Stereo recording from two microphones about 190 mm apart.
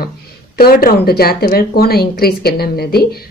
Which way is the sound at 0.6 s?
50° left (ahead or behind).